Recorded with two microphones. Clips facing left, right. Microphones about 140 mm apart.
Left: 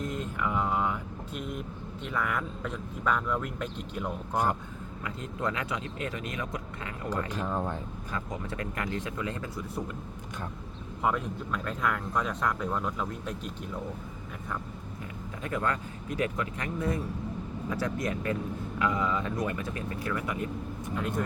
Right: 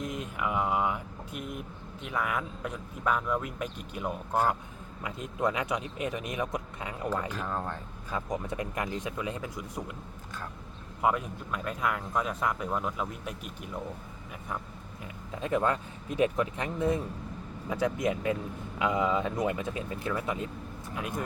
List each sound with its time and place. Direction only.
0.0 s speech: 15° right (ahead or behind)
7.3 s speech: 10° left (ahead or behind)
8.1 s speech: 20° right (ahead or behind)
11.0 s speech: 10° right (ahead or behind)
15.4 s speech: 20° right (ahead or behind)
20.9 s speech: 10° right (ahead or behind)